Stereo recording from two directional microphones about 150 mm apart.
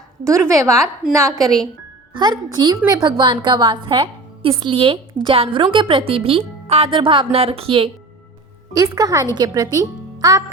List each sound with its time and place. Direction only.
0.3 s a woman's voice: 20° right (ahead or behind)
1.4 s speech: centre (ahead or behind)
2.1 s a woman's voice: 30° right (ahead or behind)
8.7 s a woman's voice: 25° right (ahead or behind)